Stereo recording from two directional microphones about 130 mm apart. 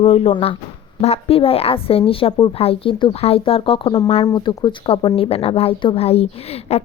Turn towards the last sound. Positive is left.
turn(degrees=50)  # may be behind; listen again after turning